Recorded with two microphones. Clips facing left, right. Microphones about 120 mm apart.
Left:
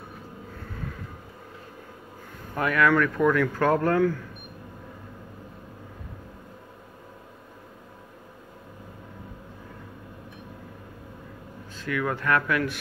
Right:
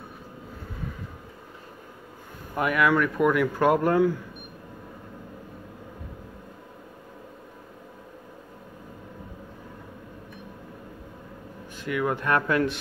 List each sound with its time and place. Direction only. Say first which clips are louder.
2.5 s speech: even; 15° right (ahead or behind)
11.7 s speech: right 1 dB; 20° right (ahead or behind)